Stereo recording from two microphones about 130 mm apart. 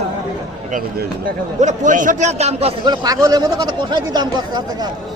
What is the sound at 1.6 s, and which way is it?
Speech, 75° right (ahead or behind).